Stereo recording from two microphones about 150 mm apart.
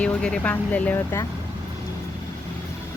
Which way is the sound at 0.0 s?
5° left (ahead or behind).